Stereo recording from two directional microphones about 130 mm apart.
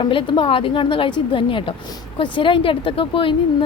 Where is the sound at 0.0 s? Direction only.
40° left (ahead or behind).